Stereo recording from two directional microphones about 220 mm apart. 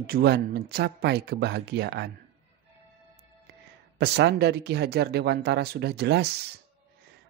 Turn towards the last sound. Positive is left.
turn(degrees=-50)  # may be behind; listen again after turning